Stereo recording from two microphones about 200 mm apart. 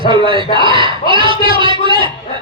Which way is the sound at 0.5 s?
25° right (ahead or behind).